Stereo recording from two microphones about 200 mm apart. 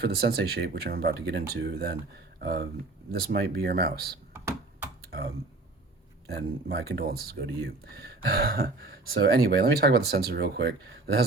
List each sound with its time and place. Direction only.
0.0 s speech: 50° right (ahead or behind)
6.2 s speech: 55° right (ahead or behind)